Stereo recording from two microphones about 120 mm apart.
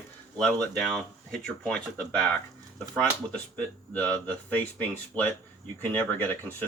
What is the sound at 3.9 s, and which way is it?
Speech, 10° left (ahead or behind).